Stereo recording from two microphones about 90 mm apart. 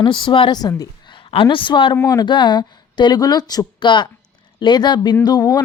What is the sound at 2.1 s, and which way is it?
Speech, 55° left (ahead or behind).